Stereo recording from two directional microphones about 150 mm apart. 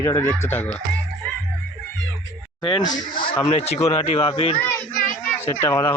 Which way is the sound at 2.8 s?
55° left (ahead or behind).